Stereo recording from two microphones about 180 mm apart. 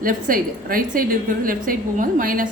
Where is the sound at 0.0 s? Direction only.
50° right (ahead or behind).